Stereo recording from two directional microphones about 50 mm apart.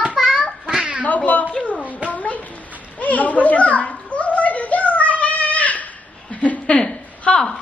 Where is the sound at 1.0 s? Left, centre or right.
Left.